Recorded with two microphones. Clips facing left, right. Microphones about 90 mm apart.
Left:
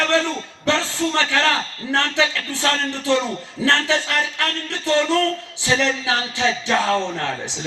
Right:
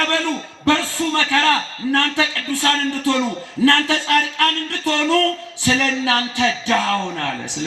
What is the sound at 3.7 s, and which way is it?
A man's voice, 55° right (ahead or behind).